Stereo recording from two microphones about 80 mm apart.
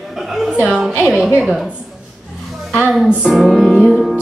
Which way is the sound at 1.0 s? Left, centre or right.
Centre.